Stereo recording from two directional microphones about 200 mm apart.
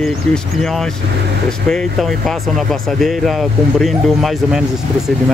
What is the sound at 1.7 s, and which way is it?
Speech, centre (ahead or behind).